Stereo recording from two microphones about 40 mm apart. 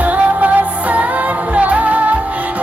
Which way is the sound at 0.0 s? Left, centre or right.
Right.